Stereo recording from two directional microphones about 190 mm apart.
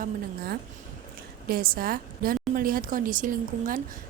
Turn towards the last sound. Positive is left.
turn(degrees=-45)  # may be behind; listen again after turning